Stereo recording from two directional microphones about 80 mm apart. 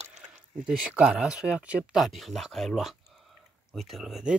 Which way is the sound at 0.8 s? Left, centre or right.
Centre.